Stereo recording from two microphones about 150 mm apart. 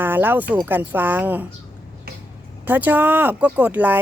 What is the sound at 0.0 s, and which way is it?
Speech, 15° right (ahead or behind).